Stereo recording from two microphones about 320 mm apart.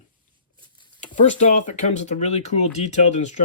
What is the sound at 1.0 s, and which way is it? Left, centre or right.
Speech, left.